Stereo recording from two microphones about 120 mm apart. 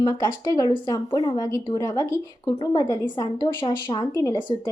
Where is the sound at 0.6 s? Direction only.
45° left (ahead or behind).